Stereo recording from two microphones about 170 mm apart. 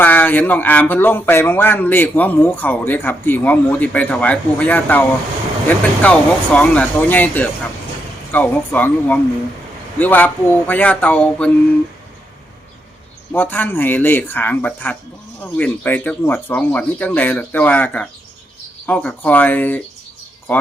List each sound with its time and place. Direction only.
0.0 s speech: 10° left (ahead or behind)
13.3 s speech: 10° left (ahead or behind)